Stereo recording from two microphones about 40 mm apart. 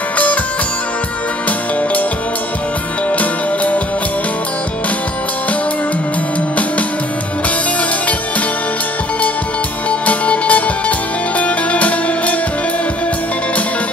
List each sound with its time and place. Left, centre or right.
3.1 s music: left
9.8 s music: left